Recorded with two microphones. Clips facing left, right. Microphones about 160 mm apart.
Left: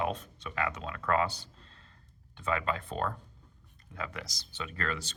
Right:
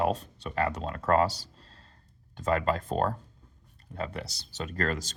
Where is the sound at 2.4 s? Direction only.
40° right (ahead or behind).